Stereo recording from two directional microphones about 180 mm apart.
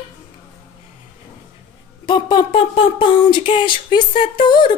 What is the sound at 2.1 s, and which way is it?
Speech, 25° left (ahead or behind).